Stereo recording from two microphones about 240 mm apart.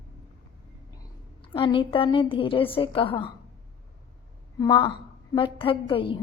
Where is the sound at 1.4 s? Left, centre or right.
Left.